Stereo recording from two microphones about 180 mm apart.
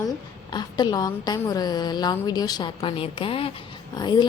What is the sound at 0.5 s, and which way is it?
A woman's voice, 25° left (ahead or behind).